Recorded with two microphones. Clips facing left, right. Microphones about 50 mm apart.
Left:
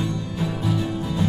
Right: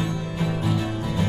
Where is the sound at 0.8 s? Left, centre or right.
Right.